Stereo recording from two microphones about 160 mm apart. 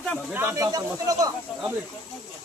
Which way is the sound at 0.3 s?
15° right (ahead or behind).